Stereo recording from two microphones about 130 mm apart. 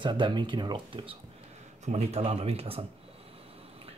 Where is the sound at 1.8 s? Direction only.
55° right (ahead or behind).